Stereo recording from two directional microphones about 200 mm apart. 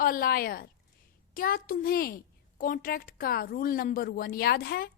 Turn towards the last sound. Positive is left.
turn(degrees=50)  # may be behind; listen again after turning